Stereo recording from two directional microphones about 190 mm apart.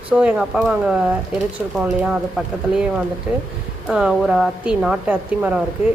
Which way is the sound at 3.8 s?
5° right (ahead or behind).